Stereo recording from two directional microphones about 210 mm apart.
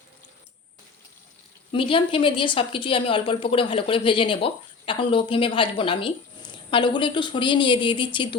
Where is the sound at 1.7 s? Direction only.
25° left (ahead or behind).